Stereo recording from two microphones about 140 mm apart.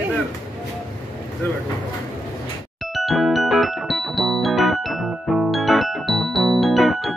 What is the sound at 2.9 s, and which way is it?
Music, centre (ahead or behind).